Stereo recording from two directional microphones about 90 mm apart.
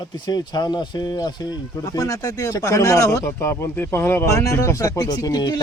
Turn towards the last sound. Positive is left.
turn(degrees=50)  # may be behind; listen again after turning